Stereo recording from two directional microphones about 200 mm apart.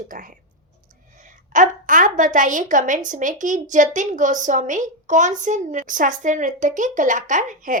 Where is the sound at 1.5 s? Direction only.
40° right (ahead or behind).